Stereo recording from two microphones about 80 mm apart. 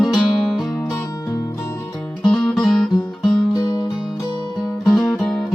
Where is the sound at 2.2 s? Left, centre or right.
Centre.